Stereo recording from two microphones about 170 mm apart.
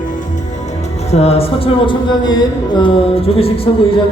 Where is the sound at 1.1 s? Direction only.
35° left (ahead or behind).